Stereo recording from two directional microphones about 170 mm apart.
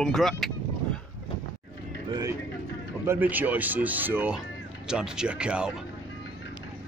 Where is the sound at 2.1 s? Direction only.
20° right (ahead or behind).